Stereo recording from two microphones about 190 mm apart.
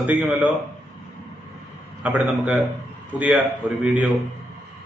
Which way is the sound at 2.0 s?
5° right (ahead or behind).